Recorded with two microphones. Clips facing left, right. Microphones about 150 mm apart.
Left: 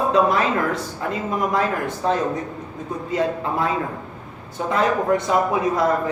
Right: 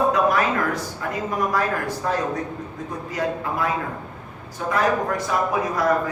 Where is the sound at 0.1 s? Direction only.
25° left (ahead or behind).